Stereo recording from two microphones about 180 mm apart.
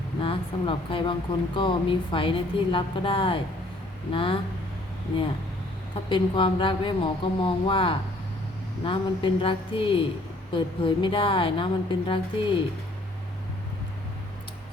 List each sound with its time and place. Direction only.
0.2 s a woman's voice: 30° left (ahead or behind)
6.1 s a woman's voice: 30° left (ahead or behind)